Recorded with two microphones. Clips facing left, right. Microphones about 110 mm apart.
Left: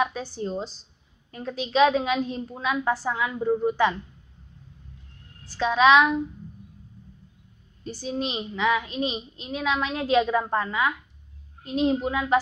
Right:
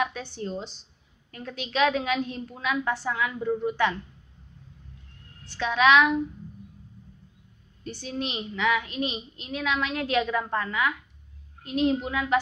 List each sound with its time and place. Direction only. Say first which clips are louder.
0.0 s a woman's voice: left 3 dB; 35° left (ahead or behind)
5.4 s a woman's voice: left 3 dB; 35° left (ahead or behind)
7.8 s a woman's voice: left 3 dB; 35° left (ahead or behind)